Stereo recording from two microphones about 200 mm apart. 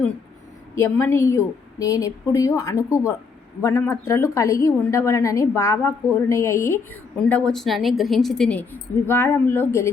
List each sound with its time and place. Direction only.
0.8 s a woman's voice: 10° left (ahead or behind)